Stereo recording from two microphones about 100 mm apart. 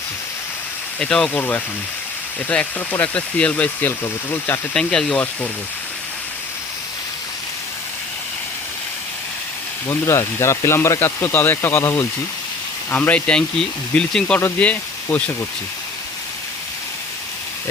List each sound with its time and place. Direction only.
0.9 s speech: 10° left (ahead or behind)
4.7 s speech: 5° left (ahead or behind)
9.9 s speech: 25° left (ahead or behind)